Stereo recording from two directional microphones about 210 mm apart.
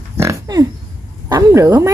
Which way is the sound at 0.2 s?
15° right (ahead or behind).